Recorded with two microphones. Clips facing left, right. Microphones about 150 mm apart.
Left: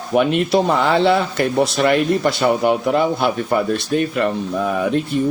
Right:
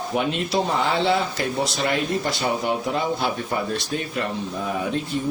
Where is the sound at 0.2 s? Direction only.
60° left (ahead or behind).